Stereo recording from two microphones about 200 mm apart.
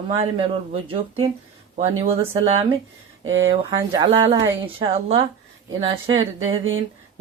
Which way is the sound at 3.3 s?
80° right.